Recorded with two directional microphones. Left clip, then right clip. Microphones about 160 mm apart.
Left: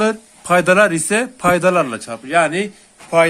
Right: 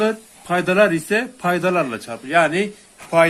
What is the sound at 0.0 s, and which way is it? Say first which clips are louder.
Speech: left 2 dB; 35° left (ahead or behind).